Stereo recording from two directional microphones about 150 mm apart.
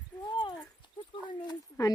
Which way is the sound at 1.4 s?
25° left (ahead or behind).